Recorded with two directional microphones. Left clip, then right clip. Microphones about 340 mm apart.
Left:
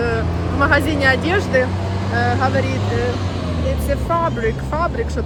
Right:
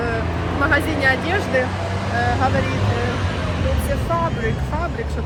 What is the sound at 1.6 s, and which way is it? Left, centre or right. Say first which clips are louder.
Vehicle: even; right.